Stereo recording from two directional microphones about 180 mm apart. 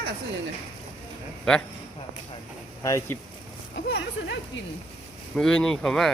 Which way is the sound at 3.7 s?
75° left (ahead or behind).